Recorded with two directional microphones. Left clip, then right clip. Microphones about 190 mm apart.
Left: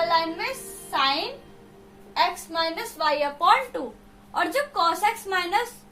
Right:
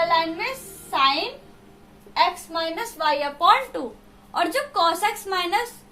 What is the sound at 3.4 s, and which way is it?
A woman's voice, 30° right (ahead or behind).